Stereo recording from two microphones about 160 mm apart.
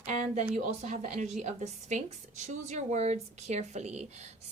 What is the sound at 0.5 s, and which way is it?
Speech, 45° right (ahead or behind).